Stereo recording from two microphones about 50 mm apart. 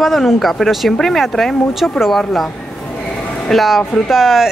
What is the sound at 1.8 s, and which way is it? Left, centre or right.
Speech, centre.